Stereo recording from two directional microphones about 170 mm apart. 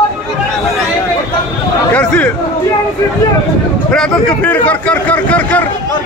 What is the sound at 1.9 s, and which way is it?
Speech, 5° left (ahead or behind).